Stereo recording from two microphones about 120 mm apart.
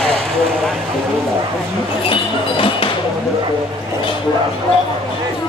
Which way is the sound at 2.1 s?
50° left (ahead or behind).